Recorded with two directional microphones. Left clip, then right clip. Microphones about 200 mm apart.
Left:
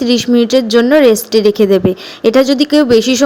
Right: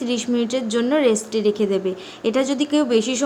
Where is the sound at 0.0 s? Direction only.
30° left (ahead or behind).